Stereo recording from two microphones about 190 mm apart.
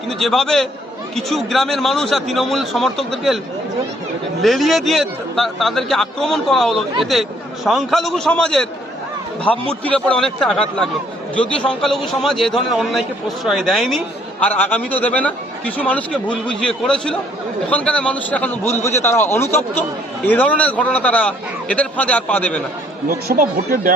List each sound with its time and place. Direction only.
0.1 s a man's voice: centre (ahead or behind)
4.4 s a man's voice: centre (ahead or behind)
23.0 s speech: 50° right (ahead or behind)